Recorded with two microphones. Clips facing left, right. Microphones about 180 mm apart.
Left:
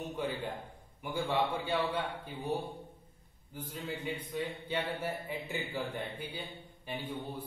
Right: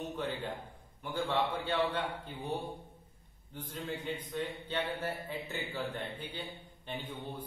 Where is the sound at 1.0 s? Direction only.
10° left (ahead or behind).